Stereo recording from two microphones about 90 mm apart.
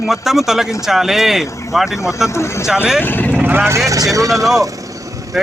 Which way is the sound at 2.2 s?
30° left (ahead or behind).